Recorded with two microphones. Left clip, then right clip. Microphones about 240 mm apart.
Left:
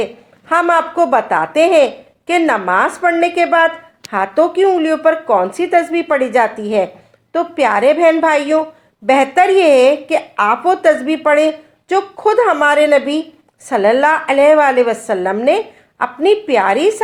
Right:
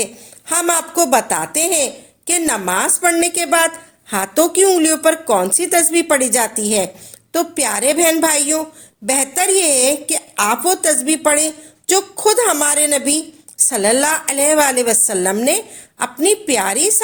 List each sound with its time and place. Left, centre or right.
0.0 s a woman's voice: right
10.8 s a woman's voice: right